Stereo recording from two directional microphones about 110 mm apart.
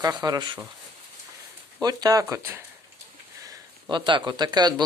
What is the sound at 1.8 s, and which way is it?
Speech, 35° right (ahead or behind).